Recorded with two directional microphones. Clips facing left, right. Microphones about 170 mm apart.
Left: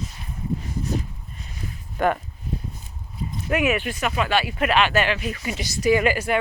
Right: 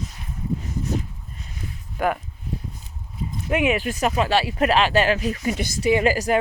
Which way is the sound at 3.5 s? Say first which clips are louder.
Right 1 dB; 25° right (ahead or behind).